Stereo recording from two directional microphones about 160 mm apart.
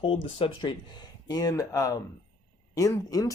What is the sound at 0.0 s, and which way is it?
Speech, 30° left (ahead or behind).